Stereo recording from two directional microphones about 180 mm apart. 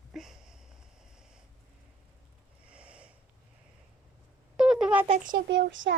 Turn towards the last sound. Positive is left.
turn(degrees=-85)